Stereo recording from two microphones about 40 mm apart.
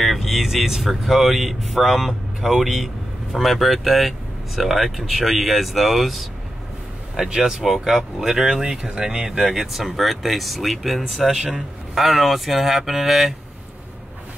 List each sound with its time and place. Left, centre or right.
0.0 s speech: centre
7.2 s speech: centre